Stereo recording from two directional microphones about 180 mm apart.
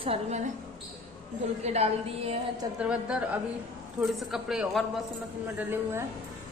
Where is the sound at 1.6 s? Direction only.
35° right (ahead or behind).